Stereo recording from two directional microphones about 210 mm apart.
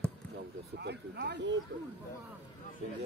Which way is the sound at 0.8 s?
55° right (ahead or behind).